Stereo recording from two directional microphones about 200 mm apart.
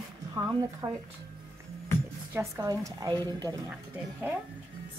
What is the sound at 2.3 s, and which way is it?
Speech, 15° right (ahead or behind).